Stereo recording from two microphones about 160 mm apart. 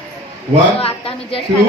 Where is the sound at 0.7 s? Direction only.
35° left (ahead or behind).